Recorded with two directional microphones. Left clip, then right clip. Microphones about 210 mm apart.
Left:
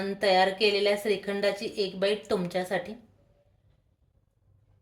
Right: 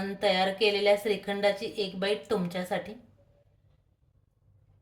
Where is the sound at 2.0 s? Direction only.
40° left (ahead or behind).